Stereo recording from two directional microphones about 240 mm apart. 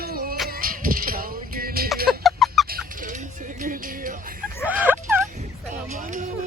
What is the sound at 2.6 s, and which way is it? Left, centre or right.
Fowl, right.